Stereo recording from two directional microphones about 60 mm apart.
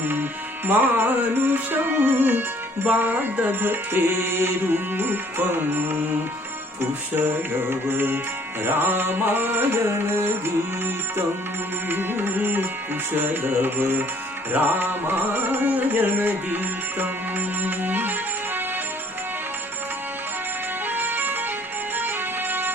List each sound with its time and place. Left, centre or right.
0.0 s music: right
7.2 s music: right
20.8 s music: right